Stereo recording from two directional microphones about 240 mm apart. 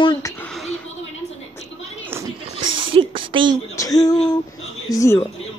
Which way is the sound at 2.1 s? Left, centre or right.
Centre.